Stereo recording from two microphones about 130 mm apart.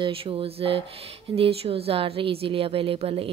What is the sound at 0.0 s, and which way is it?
A woman's voice, 45° right (ahead or behind).